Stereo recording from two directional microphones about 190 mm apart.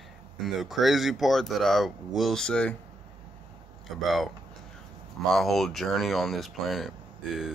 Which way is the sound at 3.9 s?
Centre (ahead or behind).